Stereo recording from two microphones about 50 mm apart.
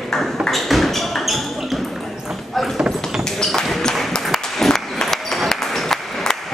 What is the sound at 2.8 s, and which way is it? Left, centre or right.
Clip-clop, centre.